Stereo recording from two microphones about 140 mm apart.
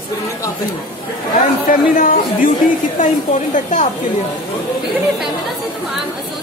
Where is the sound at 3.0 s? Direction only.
65° left (ahead or behind).